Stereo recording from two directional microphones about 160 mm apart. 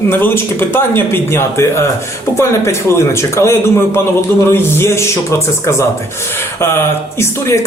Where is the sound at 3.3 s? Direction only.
15° left (ahead or behind).